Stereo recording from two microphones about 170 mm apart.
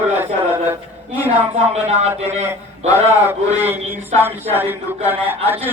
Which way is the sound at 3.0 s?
15° right (ahead or behind).